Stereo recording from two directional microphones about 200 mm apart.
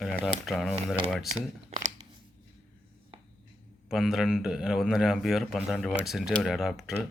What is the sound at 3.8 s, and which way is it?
A man's voice, centre (ahead or behind).